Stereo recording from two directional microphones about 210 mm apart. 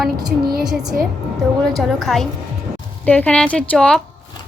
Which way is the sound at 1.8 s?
Centre (ahead or behind).